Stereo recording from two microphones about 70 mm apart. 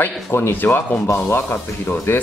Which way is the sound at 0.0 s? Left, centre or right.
Left.